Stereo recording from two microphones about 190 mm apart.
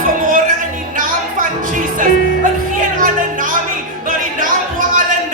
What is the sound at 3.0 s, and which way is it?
Music, 45° right (ahead or behind).